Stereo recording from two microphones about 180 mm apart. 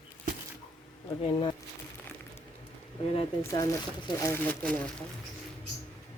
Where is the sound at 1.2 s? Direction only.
30° left (ahead or behind).